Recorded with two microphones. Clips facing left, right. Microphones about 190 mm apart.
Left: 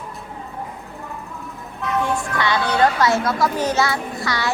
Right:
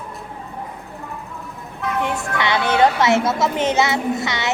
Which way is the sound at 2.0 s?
20° right (ahead or behind).